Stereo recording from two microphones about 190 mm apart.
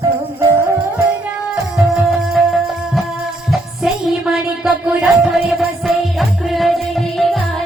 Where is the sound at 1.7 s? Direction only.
Centre (ahead or behind).